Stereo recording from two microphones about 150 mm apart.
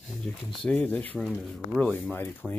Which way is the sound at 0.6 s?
10° left (ahead or behind).